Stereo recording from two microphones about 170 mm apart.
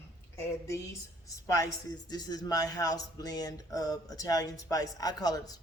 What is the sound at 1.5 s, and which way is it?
Speech, 20° left (ahead or behind).